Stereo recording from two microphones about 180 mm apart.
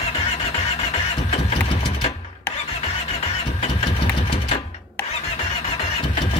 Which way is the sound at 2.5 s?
35° left (ahead or behind).